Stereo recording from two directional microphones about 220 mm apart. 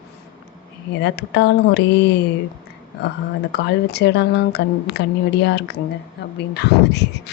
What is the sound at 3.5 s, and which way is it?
Speech, 50° left (ahead or behind).